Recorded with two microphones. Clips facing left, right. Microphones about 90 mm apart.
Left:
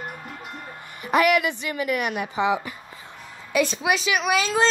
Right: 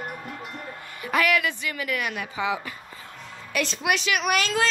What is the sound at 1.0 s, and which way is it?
A woman's voice, 20° left (ahead or behind).